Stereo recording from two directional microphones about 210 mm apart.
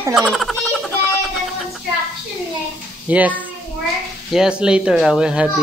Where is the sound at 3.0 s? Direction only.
5° right (ahead or behind).